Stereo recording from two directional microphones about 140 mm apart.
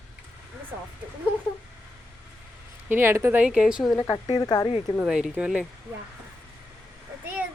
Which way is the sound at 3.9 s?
30° left (ahead or behind).